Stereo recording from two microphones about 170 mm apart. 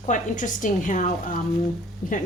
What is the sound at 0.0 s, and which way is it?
Speech, 50° left (ahead or behind).